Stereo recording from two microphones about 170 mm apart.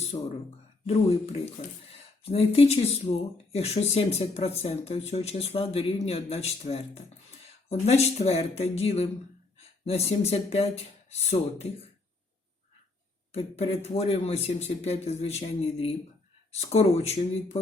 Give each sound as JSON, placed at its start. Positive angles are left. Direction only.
{"t": 0.1, "sound": "speech", "side_deg": 35}
{"t": 13.3, "sound": "speech", "side_deg": 35}